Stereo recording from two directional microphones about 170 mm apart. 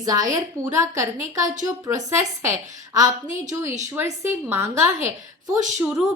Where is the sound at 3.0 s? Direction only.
45° right (ahead or behind).